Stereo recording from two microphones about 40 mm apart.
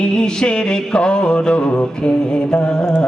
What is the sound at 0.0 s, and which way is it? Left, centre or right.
Music, left.